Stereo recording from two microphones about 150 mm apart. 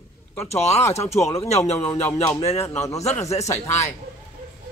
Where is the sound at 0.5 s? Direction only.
45° left (ahead or behind).